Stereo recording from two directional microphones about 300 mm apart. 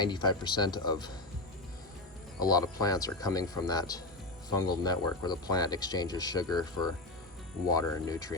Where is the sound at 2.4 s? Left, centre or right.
Centre.